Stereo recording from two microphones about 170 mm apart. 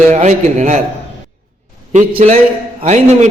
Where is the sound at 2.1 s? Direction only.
40° right (ahead or behind).